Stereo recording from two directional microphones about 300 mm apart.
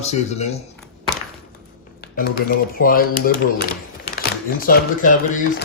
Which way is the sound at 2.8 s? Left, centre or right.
Left.